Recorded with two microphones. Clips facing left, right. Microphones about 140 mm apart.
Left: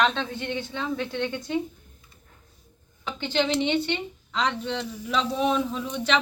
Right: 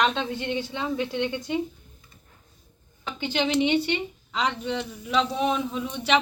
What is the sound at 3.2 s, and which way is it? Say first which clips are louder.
Speech: right 1 dB; 15° right (ahead or behind).